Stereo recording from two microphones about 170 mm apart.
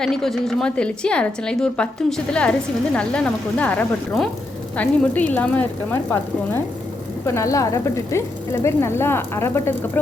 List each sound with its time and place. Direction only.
0.0 s a woman's voice: 5° left (ahead or behind)